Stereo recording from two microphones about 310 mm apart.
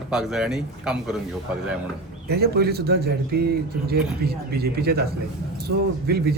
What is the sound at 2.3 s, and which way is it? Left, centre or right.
Speech, right.